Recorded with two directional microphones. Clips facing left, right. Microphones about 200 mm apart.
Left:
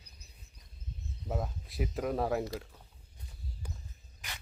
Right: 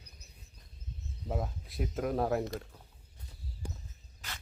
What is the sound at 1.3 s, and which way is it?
Speech, centre (ahead or behind).